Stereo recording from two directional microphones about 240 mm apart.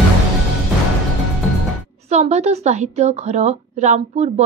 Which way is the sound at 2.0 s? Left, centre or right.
Right.